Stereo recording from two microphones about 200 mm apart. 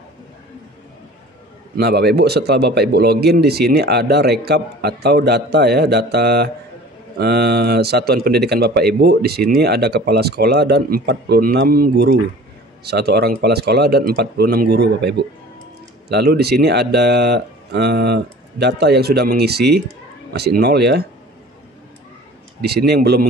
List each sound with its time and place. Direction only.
1.8 s speech: 55° right (ahead or behind)
22.6 s speech: 55° right (ahead or behind)